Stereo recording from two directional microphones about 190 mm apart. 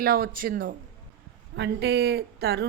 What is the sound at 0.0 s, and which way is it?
Speech, 50° right (ahead or behind).